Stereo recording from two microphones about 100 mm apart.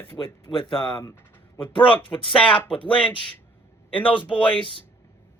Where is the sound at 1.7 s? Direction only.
15° left (ahead or behind).